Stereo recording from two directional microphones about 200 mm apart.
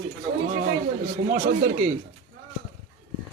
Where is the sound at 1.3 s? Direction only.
40° right (ahead or behind).